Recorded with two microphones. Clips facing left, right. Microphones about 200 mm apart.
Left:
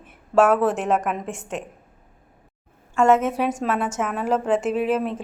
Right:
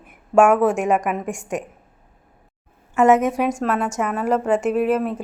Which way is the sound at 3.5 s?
Centre (ahead or behind).